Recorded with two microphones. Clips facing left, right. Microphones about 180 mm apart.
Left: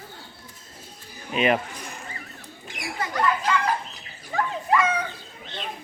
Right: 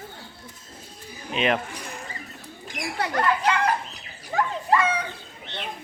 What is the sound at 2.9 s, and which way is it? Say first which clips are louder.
Children playing: right 1 dB; 65° right (ahead or behind).